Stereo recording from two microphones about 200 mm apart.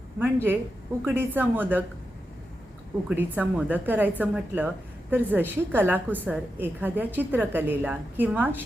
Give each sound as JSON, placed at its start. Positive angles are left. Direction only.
{"t": 0.2, "sound": "a woman's voice", "side_deg": -10}
{"t": 3.1, "sound": "a woman's voice", "side_deg": -10}